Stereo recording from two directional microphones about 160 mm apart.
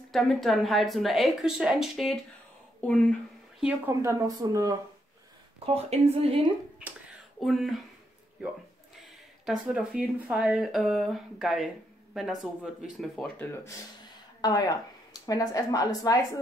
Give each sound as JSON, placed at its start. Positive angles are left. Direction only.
{"t": 0.1, "sound": "speech", "side_deg": 0}
{"t": 3.6, "sound": "speech", "side_deg": -15}
{"t": 5.9, "sound": "speech", "side_deg": -40}
{"t": 7.3, "sound": "speech", "side_deg": 0}
{"t": 9.0, "sound": "speech", "side_deg": 0}
{"t": 14.4, "sound": "speech", "side_deg": 25}